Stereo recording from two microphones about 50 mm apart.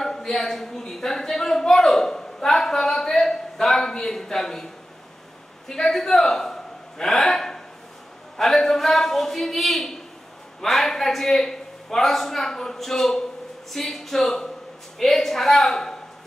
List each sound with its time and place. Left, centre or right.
0.0 s speech: centre
5.7 s a man's voice: centre